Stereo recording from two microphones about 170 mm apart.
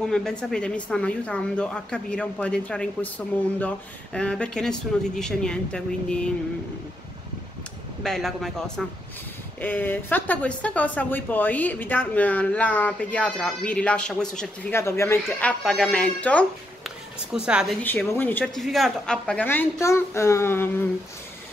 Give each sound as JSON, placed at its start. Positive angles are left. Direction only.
{"t": 0.0, "sound": "a woman's voice", "side_deg": 5}
{"t": 8.0, "sound": "a woman's voice", "side_deg": 0}
{"t": 14.7, "sound": "a woman's voice", "side_deg": 15}
{"t": 17.3, "sound": "a woman's voice", "side_deg": -5}
{"t": 17.8, "sound": "a woman's voice", "side_deg": 10}